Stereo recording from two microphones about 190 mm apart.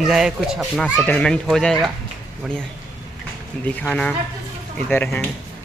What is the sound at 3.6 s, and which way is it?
Speech, 10° left (ahead or behind).